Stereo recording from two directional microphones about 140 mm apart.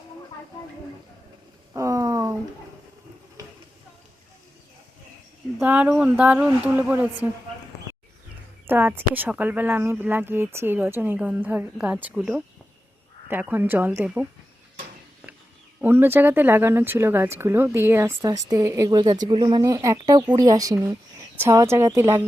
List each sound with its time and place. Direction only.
1.7 s a sound: 20° right (ahead or behind)
5.5 s speech: 10° right (ahead or behind)
8.6 s speech: 15° right (ahead or behind)
15.8 s speech: 15° right (ahead or behind)